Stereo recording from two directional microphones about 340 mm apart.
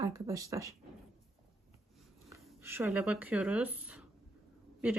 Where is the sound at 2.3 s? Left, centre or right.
Centre.